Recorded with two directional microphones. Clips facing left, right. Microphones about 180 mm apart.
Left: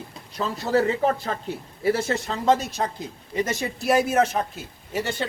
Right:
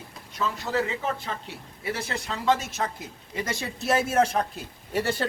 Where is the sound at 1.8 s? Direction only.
30° left (ahead or behind).